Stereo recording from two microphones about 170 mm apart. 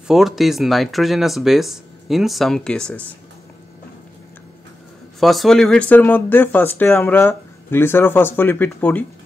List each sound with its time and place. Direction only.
0.1 s speech: centre (ahead or behind)
5.2 s speech: centre (ahead or behind)